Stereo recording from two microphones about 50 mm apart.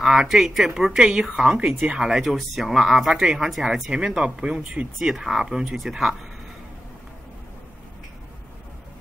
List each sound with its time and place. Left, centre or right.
0.0 s speech: centre
2.2 s speech: centre
3.9 s speech: centre
5.0 s speech: centre